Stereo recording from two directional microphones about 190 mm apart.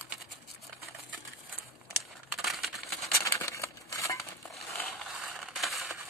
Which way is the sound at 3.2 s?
15° left (ahead or behind).